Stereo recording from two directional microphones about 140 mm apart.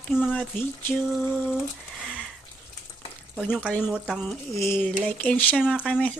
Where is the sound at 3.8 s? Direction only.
5° right (ahead or behind).